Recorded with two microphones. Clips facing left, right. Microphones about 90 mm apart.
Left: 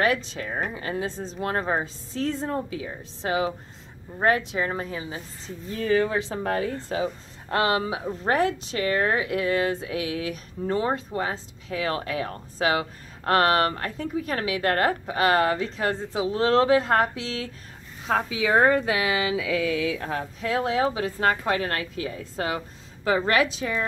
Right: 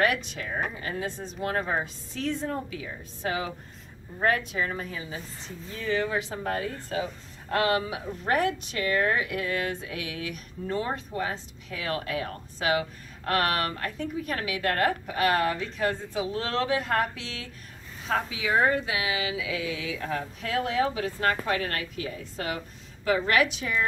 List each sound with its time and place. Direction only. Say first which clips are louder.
0.0 s a woman's voice: left 2 dB; 30° left (ahead or behind)
18.5 s a woman's voice: left 4 dB; 45° left (ahead or behind); by 23.8 s 30° left (ahead or behind)